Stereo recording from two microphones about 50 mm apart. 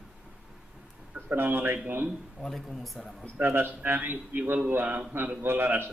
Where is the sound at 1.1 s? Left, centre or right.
Right.